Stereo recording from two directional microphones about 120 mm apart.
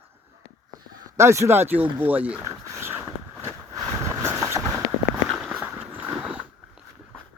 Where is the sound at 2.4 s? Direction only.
20° right (ahead or behind).